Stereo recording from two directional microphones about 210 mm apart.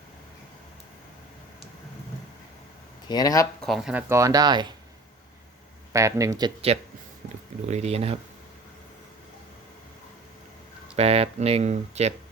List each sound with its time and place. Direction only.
3.1 s speech: 20° left (ahead or behind)
3.6 s speech: centre (ahead or behind); by 4.7 s 20° right (ahead or behind)
5.9 s speech: 15° right (ahead or behind)
6.7 s speech: 30° right (ahead or behind)
10.9 s speech: 30° right (ahead or behind)